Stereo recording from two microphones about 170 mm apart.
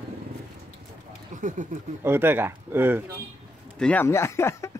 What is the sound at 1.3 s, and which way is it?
Speech, 45° right (ahead or behind).